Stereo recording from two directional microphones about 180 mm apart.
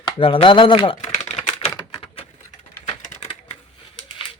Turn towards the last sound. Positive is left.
turn(degrees=35)  # may be behind; listen again after turning